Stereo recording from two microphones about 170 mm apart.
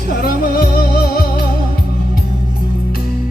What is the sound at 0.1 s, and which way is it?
Music, 60° left (ahead or behind).